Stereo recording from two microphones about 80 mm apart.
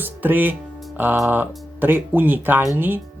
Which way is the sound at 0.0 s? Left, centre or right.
Right.